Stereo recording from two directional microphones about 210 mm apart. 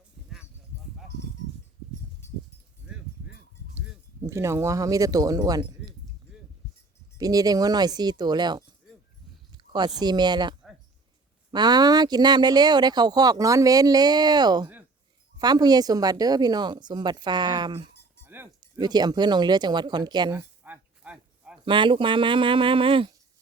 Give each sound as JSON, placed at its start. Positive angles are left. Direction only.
{"t": 3.8, "sound": "speech", "side_deg": -10}
{"t": 7.2, "sound": "speech", "side_deg": -15}
{"t": 11.5, "sound": "speech", "side_deg": -20}
{"t": 20.7, "sound": "a sound", "side_deg": -5}
{"t": 21.6, "sound": "speech", "side_deg": -25}